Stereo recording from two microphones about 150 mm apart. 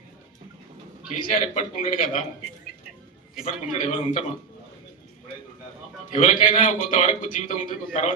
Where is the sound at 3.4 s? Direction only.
60° left (ahead or behind).